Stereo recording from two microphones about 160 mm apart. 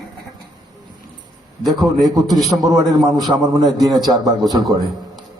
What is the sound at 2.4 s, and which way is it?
Speech, centre (ahead or behind).